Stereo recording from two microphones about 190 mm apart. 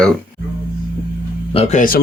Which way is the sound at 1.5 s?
35° left (ahead or behind).